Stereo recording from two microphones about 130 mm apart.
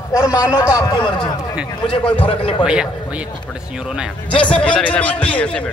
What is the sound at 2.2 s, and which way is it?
Speech, 45° left (ahead or behind).